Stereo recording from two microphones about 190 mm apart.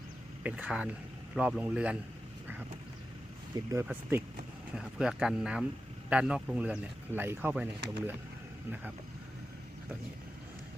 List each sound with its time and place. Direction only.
0.4 s speech: 5° right (ahead or behind)
3.5 s speech: 15° right (ahead or behind)
4.7 s speech: 5° right (ahead or behind)